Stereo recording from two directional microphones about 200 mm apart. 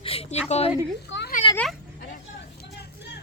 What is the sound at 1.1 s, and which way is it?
Speech, 65° left (ahead or behind).